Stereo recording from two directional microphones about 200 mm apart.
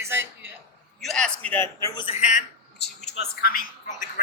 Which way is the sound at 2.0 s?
30° left (ahead or behind).